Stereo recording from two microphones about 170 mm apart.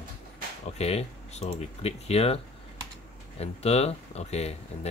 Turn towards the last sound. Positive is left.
turn(degrees=40)  # may be behind; listen again after turning